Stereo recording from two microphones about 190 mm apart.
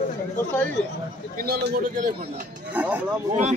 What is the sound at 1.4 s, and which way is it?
Speech, 55° right (ahead or behind).